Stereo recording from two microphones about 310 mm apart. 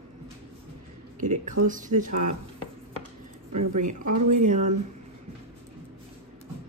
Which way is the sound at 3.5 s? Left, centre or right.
Right.